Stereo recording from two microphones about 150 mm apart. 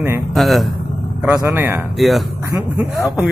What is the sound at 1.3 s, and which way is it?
Speech, 15° right (ahead or behind).